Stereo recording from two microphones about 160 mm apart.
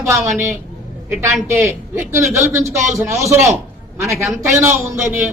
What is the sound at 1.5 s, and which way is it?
A man's voice, 15° right (ahead or behind).